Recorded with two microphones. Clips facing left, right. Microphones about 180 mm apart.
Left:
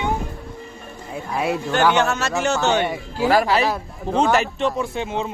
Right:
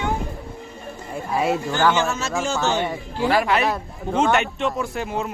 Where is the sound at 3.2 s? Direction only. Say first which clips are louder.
Left 2 dB; 40° left (ahead or behind).